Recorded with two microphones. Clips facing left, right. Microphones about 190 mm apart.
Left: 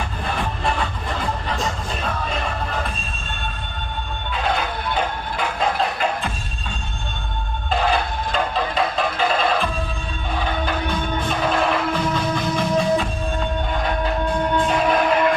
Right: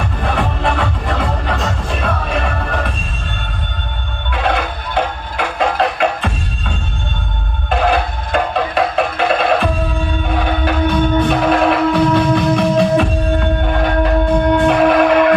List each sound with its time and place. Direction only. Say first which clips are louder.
0.3 s music: right 6 dB; 70° right (ahead or behind)
4.4 s music: right 5 dB; 70° right (ahead or behind)
7.7 s music: right 5 dB; 65° right (ahead or behind)